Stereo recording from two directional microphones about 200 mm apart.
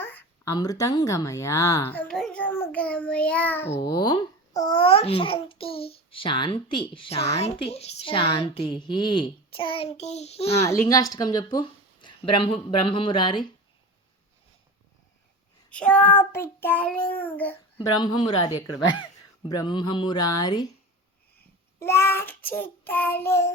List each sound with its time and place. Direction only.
0.0 s speech: 10° left (ahead or behind)
3.8 s a child's voice: 20° left (ahead or behind)
10.6 s a child's voice: 15° left (ahead or behind)
15.7 s child singing: 5° left (ahead or behind)
17.9 s a child's voice: 20° left (ahead or behind)
21.8 s child singing: 15° left (ahead or behind)